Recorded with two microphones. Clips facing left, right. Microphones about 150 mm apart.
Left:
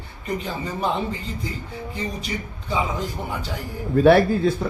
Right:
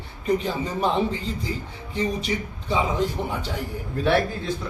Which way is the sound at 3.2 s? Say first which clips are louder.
Right 2 dB; 5° left (ahead or behind).